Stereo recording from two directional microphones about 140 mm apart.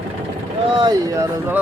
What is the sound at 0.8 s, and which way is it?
Speech, 30° right (ahead or behind).